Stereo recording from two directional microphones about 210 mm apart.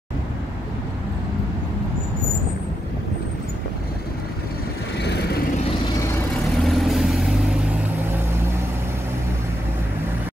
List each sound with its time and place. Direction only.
4.9 s vehicle: 55° left (ahead or behind)
6.4 s vehicle: centre (ahead or behind)